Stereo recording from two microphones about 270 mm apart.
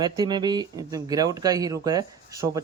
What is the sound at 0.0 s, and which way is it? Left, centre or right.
Speech, centre.